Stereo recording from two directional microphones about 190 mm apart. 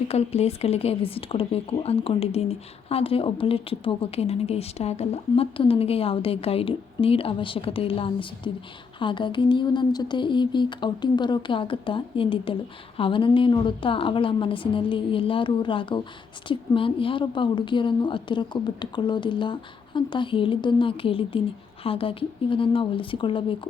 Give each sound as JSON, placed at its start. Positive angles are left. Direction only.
{"t": 0.1, "sound": "a woman's voice", "side_deg": 35}